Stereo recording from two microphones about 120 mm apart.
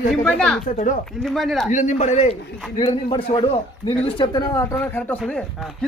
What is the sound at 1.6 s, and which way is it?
Speech, 85° left.